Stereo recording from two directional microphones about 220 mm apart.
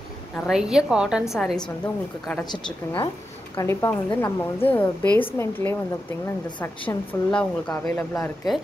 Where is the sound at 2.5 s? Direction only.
20° left (ahead or behind).